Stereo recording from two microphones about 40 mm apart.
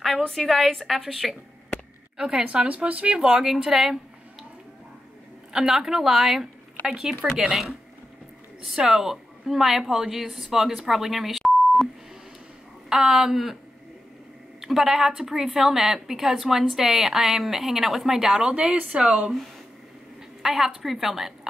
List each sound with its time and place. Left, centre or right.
0.3 s a woman's voice: centre
2.1 s a woman's voice: centre
2.4 s speech: right
3.2 s a woman's voice: centre
5.5 s a woman's voice: centre
8.6 s a woman's voice: centre
12.9 s a woman's voice: centre
14.6 s a woman's voice: centre
18.5 s speech: right
20.4 s a woman's voice: centre